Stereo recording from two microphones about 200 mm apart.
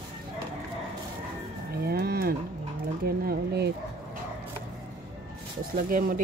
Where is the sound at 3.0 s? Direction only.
50° right (ahead or behind).